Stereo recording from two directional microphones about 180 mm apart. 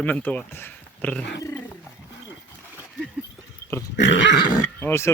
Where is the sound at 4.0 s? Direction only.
85° left.